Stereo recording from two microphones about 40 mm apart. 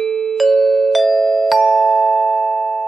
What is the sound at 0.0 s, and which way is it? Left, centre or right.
Music, centre.